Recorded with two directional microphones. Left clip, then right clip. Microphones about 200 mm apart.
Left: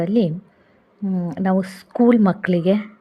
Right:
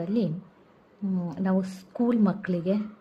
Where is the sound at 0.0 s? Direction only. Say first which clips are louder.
Left 9 dB; 35° left (ahead or behind).